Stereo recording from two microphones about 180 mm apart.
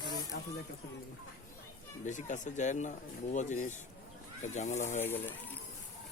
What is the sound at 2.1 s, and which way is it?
Speech, 45° left (ahead or behind).